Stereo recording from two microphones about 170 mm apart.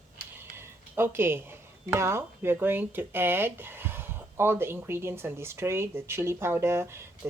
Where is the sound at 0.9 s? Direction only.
15° right (ahead or behind).